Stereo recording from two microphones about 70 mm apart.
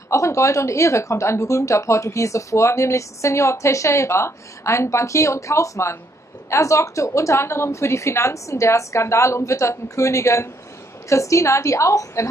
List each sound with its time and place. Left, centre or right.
0.1 s speech: left